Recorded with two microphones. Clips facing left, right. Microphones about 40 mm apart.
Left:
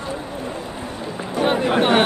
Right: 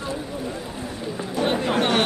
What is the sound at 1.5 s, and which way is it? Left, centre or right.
Speech, left.